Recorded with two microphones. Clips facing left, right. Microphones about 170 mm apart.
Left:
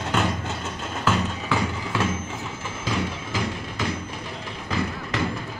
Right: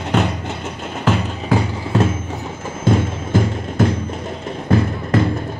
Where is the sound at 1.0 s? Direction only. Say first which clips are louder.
Right 5 dB; 40° right (ahead or behind).